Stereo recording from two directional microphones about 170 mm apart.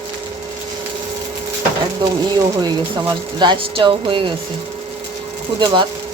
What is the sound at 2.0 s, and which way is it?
Speech, 25° right (ahead or behind).